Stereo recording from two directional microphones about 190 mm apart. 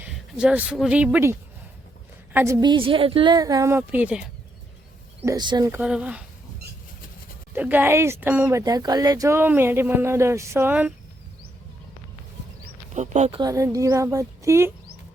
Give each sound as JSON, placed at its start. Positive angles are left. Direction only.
{"t": 0.0, "sound": "a woman's voice", "side_deg": -5}
{"t": 5.2, "sound": "speech", "side_deg": -20}
{"t": 5.8, "sound": "speech", "side_deg": -5}
{"t": 7.5, "sound": "speech", "side_deg": -10}
{"t": 12.9, "sound": "speech", "side_deg": -40}
{"t": 13.4, "sound": "speech", "side_deg": -15}